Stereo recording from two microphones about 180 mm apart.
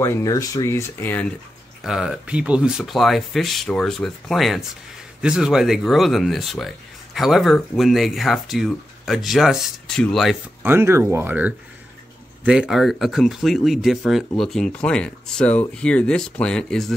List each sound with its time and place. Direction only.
0.0 s speech: 15° left (ahead or behind)
1.8 s speech: 5° right (ahead or behind)
10.6 s speech: 10° right (ahead or behind)